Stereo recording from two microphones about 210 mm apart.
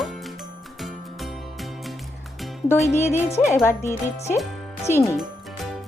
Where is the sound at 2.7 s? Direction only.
10° left (ahead or behind).